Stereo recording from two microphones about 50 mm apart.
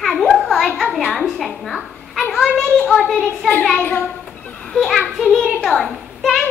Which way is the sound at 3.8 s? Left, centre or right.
Left.